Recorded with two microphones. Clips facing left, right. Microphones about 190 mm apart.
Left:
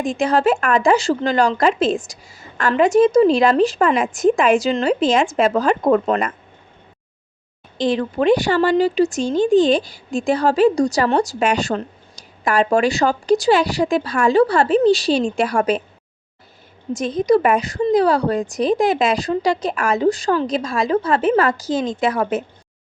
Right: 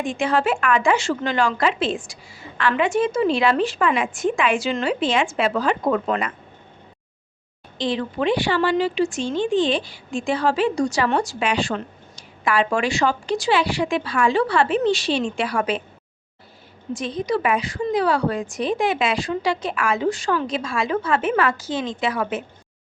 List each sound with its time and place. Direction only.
0.0 s speech: 40° left (ahead or behind)
7.8 s speech: 45° left (ahead or behind)
16.9 s speech: 45° left (ahead or behind)